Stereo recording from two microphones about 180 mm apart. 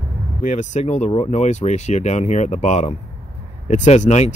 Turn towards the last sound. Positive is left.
turn(degrees=40)  # may be behind; listen again after turning